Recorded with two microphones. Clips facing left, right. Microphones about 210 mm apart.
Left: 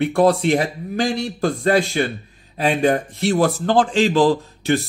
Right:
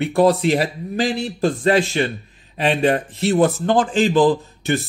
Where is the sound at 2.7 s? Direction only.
Centre (ahead or behind).